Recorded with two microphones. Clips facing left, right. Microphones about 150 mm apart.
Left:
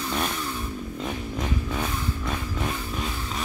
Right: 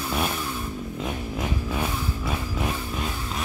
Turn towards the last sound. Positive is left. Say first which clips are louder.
# right 1 dB
turn(degrees=0)  # may be behind; listen again after turning